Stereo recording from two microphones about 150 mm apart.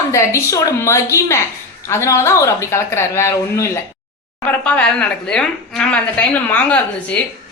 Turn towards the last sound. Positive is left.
turn(degrees=10)  # may be behind; listen again after turning